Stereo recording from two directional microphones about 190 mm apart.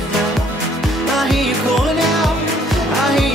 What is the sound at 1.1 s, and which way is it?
Music, centre (ahead or behind).